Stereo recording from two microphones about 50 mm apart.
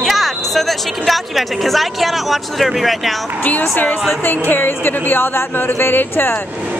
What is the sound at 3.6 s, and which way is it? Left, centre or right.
Speech, left.